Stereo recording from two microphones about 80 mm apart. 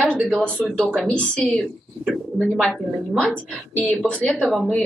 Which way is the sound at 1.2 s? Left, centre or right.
Centre.